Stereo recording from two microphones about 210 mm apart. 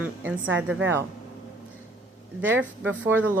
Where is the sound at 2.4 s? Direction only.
10° right (ahead or behind).